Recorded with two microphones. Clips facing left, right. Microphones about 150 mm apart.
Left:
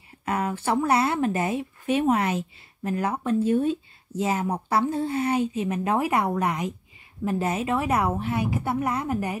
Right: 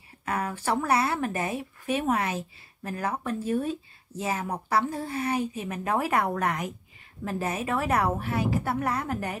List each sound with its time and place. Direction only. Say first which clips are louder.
0.2 s speech: left 3 dB; 25° left (ahead or behind)
1.5 s speech: left 4 dB; 35° right (ahead or behind)
2.0 s speech: left 4 dB; 30° left (ahead or behind); by 6.6 s 15° left (ahead or behind)
7.2 s speech: left 4 dB; 25° left (ahead or behind)
7.7 s a woman's voice: even; 15° left (ahead or behind)